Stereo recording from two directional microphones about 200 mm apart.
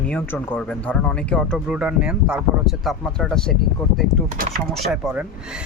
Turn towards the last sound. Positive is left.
turn(degrees=0)  # may be behind; listen again after turning